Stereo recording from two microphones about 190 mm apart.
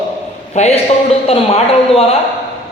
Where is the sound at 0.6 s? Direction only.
35° left (ahead or behind).